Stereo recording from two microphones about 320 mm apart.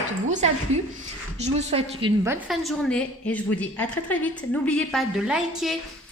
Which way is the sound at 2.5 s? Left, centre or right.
Centre.